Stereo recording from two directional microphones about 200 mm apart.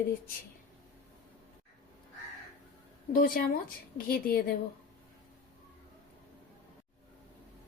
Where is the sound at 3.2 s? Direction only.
45° left (ahead or behind).